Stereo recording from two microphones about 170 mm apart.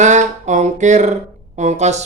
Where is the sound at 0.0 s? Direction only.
45° right (ahead or behind).